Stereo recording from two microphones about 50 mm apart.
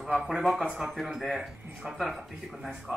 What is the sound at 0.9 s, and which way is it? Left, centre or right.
A man's voice, centre.